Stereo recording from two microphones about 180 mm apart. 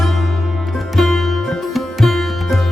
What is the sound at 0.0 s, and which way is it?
Sitar, centre (ahead or behind).